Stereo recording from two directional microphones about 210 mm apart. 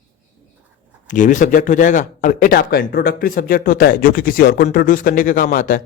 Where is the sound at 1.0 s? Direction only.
35° left (ahead or behind).